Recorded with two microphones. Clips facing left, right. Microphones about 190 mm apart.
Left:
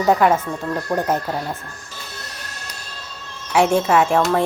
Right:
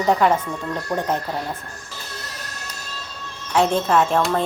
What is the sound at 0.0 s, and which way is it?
Speech, 5° left (ahead or behind).